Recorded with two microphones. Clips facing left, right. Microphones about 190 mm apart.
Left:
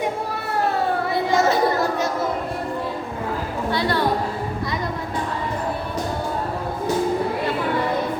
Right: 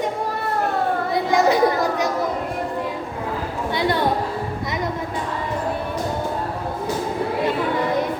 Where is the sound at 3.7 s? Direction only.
20° right (ahead or behind).